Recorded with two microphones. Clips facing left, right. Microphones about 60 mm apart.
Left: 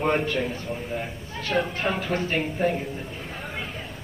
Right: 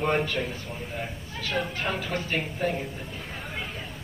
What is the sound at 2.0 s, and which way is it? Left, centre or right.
Speech, left.